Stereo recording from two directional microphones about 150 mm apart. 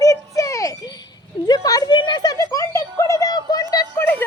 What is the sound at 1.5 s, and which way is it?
Music, 25° left (ahead or behind).